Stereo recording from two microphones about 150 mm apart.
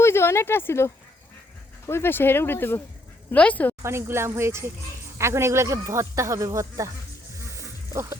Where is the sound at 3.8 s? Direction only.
15° right (ahead or behind).